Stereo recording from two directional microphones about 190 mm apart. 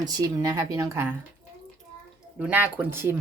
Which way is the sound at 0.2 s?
20° right (ahead or behind).